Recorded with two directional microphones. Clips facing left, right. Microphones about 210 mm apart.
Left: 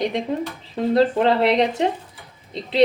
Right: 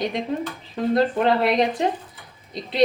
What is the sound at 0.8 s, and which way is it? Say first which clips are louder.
Speech: left 2 dB; 25° left (ahead or behind).